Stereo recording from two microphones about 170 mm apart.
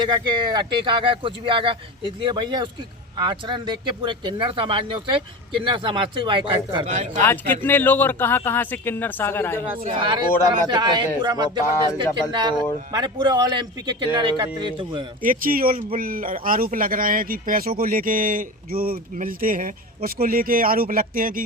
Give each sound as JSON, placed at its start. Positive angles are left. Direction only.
{"t": 0.3, "sound": "speech", "side_deg": -25}
{"t": 7.2, "sound": "speech", "side_deg": 10}
{"t": 10.0, "sound": "speech", "side_deg": -25}
{"t": 15.2, "sound": "speech", "side_deg": -55}